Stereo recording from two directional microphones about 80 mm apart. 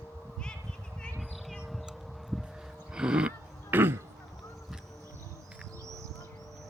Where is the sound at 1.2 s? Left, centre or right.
Centre.